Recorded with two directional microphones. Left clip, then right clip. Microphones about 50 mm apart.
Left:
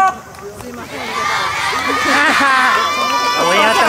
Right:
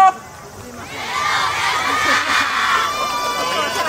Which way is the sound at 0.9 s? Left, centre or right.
Centre.